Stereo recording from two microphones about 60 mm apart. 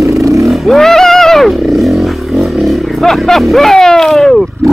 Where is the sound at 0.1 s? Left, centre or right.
Right.